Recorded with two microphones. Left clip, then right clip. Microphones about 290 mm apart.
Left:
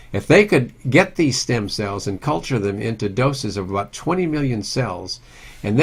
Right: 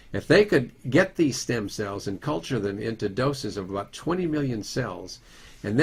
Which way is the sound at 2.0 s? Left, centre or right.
Left.